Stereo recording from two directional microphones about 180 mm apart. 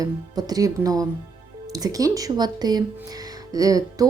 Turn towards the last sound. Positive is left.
turn(degrees=-20)  # may be behind; listen again after turning